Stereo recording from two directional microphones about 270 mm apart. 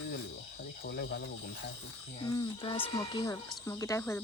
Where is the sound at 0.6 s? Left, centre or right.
Left.